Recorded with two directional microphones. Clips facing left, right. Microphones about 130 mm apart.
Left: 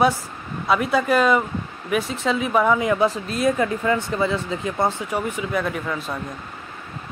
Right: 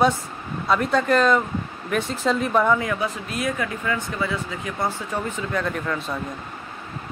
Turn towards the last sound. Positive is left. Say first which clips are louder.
# even
turn(degrees=5)  # may be behind; listen again after turning